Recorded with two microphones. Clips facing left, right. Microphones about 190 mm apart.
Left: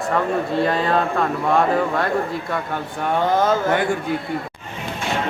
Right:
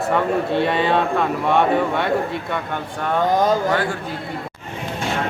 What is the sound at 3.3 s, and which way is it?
Speech, 15° right (ahead or behind).